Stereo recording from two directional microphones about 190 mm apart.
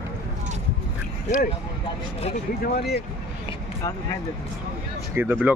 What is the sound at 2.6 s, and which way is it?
Speech, 55° left (ahead or behind).